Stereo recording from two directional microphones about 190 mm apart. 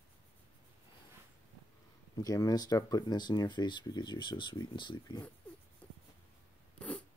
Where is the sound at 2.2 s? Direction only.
20° left (ahead or behind).